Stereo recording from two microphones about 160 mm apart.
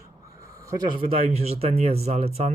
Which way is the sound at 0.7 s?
30° right (ahead or behind).